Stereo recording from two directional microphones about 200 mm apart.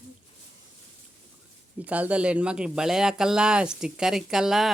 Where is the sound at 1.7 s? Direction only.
5° right (ahead or behind).